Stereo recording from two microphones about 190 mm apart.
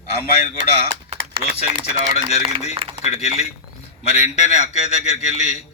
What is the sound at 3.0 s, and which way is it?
A man's voice, 35° left (ahead or behind).